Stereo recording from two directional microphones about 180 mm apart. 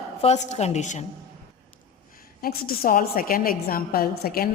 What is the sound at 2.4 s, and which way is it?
A woman's voice, 55° left (ahead or behind).